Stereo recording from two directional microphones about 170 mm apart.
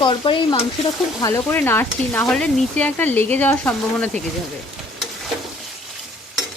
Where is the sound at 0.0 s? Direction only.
30° left (ahead or behind).